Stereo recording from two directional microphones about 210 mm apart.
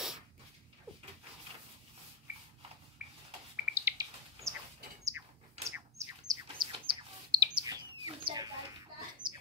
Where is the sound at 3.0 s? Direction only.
5° right (ahead or behind).